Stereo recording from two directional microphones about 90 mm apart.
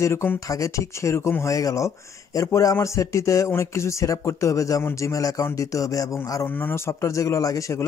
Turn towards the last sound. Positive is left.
turn(degrees=35)  # may be behind; listen again after turning